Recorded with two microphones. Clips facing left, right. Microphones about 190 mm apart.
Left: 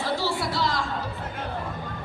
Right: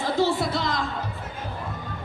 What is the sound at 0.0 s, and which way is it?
Music, 20° right (ahead or behind).